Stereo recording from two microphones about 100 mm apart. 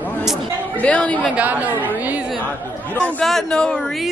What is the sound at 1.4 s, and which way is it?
Speech, 15° right (ahead or behind).